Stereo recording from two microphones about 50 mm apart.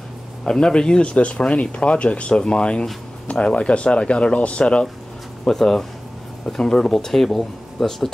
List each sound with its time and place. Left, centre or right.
0.4 s speech: centre
5.4 s speech: centre